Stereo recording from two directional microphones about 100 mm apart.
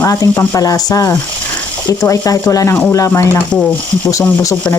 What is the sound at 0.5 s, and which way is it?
Speech, 35° left (ahead or behind).